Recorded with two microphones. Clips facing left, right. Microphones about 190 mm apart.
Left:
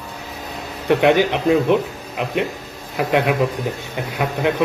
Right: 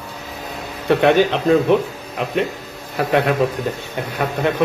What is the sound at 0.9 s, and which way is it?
A man's voice, 15° left (ahead or behind).